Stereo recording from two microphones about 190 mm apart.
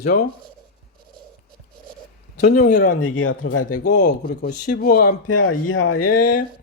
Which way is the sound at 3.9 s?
45° left (ahead or behind).